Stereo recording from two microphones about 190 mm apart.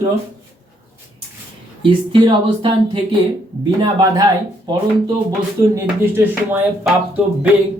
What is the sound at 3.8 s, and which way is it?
Speech, 20° right (ahead or behind).